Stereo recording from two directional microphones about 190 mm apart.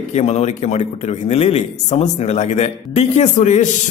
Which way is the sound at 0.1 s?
35° left (ahead or behind).